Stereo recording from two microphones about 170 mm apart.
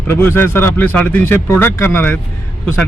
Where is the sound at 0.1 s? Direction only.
15° left (ahead or behind).